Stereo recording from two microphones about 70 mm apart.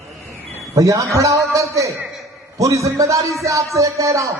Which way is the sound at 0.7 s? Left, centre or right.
Right.